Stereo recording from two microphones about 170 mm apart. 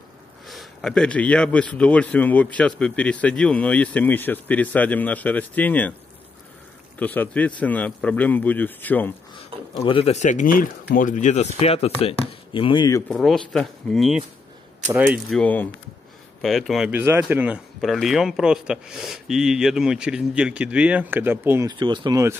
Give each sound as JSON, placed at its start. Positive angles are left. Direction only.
{"t": 0.5, "sound": "speech", "side_deg": 0}
{"t": 7.0, "sound": "speech", "side_deg": 10}
{"t": 9.8, "sound": "speech", "side_deg": 35}
{"t": 13.1, "sound": "speech", "side_deg": 0}
{"t": 15.3, "sound": "speech", "side_deg": 10}
{"t": 17.7, "sound": "speech", "side_deg": 0}
{"t": 21.6, "sound": "speech", "side_deg": -25}